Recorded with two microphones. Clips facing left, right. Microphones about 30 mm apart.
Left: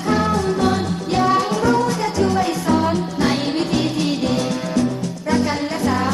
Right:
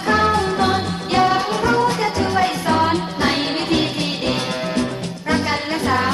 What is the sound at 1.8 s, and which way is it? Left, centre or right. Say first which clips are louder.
Music: right 1 dB; right.